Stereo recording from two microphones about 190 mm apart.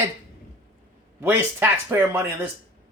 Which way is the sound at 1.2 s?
10° right (ahead or behind).